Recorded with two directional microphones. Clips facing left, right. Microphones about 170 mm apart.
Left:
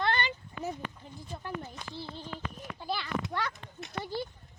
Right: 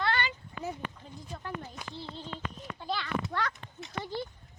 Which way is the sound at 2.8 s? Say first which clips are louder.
Even; 5° left (ahead or behind).